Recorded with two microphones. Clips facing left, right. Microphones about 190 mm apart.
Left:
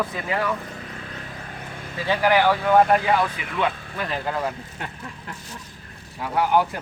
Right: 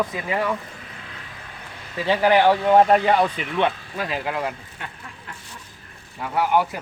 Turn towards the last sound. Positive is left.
turn(degrees=0)  # may be behind; listen again after turning